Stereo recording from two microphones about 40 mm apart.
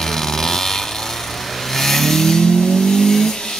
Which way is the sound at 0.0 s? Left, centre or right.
Centre.